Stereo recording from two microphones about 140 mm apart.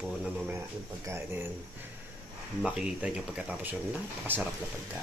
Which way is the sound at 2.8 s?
10° right (ahead or behind).